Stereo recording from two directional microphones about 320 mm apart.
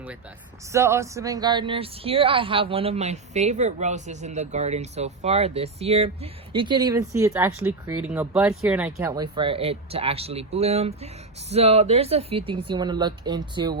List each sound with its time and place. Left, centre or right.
0.7 s speech: centre